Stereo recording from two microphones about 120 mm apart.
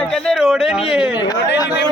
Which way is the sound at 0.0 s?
5° left (ahead or behind).